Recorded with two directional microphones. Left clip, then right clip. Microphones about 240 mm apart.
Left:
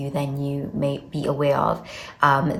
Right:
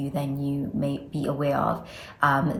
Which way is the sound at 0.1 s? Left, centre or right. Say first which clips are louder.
Left 3 dB; left.